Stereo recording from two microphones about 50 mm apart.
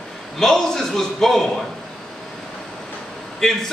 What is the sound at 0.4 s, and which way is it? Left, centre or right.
A man's voice, centre.